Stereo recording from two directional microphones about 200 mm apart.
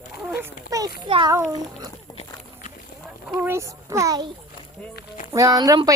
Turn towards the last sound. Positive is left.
turn(degrees=-20)  # may be behind; listen again after turning